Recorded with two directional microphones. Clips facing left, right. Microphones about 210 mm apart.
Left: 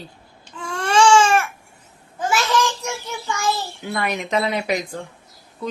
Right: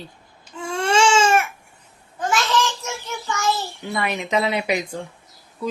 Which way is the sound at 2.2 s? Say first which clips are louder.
Left 1 dB; 10° left (ahead or behind).